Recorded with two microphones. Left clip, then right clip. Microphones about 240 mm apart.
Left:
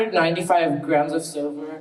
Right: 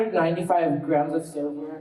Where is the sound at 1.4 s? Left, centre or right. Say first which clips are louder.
Left 2 dB; right.